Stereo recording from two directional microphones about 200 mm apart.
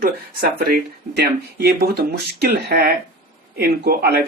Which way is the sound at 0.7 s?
50° right (ahead or behind).